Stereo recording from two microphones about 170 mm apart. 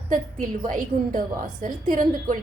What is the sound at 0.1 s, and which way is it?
A woman's voice, 50° right (ahead or behind).